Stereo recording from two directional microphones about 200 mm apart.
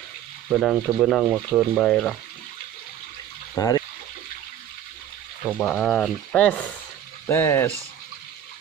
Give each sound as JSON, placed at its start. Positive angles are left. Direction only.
{"t": 0.5, "sound": "speech", "side_deg": 0}
{"t": 3.5, "sound": "speech", "side_deg": 20}
{"t": 5.6, "sound": "speech", "side_deg": 5}